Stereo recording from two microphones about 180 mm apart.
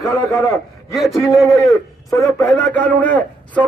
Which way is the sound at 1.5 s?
20° left (ahead or behind).